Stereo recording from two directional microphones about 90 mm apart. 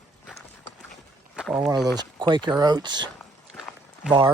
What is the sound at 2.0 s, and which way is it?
Speech, 55° right (ahead or behind).